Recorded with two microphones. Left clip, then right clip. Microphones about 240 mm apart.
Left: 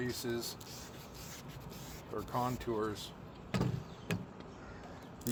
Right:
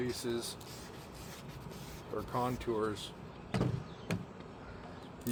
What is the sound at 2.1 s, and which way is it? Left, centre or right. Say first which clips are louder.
Speech: right 1 dB; left.